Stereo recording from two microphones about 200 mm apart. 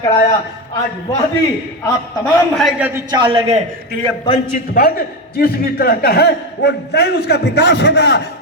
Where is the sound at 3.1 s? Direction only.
25° right (ahead or behind).